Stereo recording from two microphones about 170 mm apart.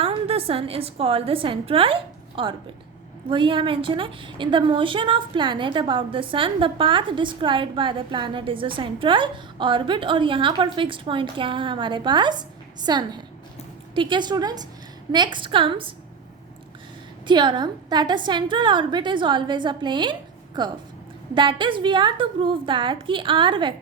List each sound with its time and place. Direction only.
0.0 s a woman's voice: 35° right (ahead or behind)
17.2 s a woman's voice: 25° right (ahead or behind)